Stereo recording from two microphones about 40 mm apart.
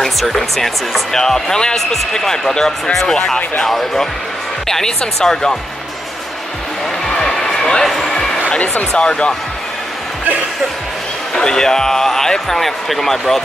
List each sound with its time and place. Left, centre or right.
0.3 s speech: centre
7.3 s a sound: centre
8.4 s speech: left
11.3 s speech: centre